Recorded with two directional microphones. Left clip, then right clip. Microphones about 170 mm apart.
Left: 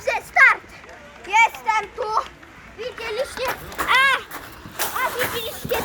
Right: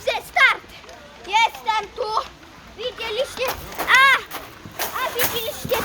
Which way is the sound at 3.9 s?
15° right (ahead or behind).